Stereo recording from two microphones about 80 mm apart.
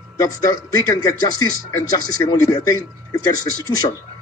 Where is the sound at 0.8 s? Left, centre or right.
Left.